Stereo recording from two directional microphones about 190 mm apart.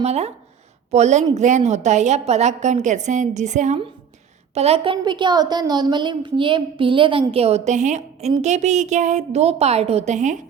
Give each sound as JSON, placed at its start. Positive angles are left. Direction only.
{"t": 0.0, "sound": "a woman's voice", "side_deg": -35}